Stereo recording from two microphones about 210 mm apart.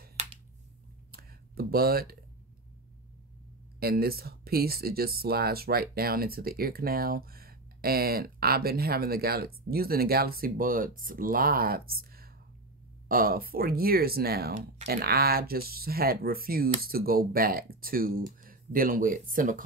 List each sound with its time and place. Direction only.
0.2 s finger snapping: 30° right (ahead or behind)
1.1 s a sound: 45° right (ahead or behind)
3.8 s speech: 45° right (ahead or behind)